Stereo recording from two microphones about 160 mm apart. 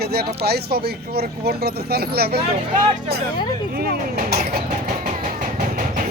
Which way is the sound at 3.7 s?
70° right (ahead or behind).